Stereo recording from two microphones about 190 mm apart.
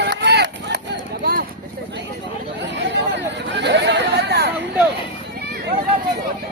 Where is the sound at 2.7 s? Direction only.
70° right (ahead or behind).